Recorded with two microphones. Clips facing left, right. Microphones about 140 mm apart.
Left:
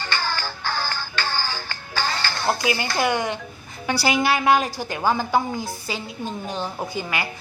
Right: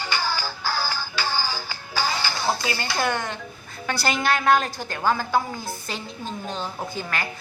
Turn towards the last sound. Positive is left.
turn(degrees=10)  # may be behind; listen again after turning